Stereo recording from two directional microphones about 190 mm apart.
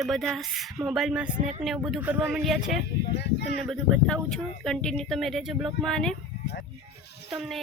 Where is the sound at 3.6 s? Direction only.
Centre (ahead or behind).